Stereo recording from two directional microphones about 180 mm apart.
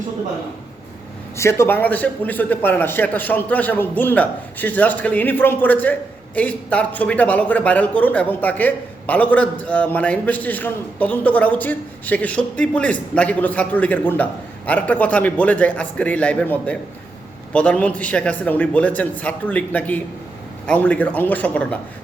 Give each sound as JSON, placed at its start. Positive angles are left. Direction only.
{"t": 1.4, "sound": "a man's voice", "side_deg": 15}